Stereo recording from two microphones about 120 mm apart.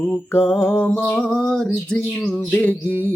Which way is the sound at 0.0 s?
15° left (ahead or behind).